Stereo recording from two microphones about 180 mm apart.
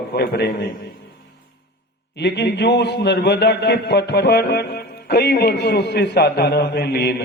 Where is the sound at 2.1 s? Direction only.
70° left (ahead or behind).